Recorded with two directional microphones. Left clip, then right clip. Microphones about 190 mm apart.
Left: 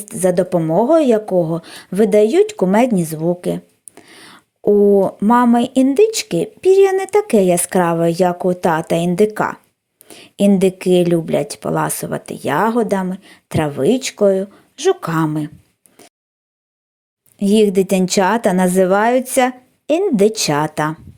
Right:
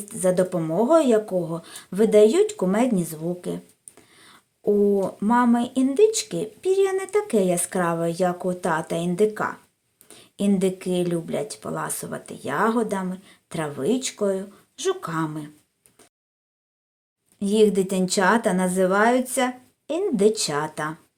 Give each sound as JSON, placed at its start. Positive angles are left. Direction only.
{"t": 0.0, "sound": "speech", "side_deg": 30}
{"t": 16.0, "sound": "a sound", "side_deg": 35}
{"t": 17.4, "sound": "speech", "side_deg": 35}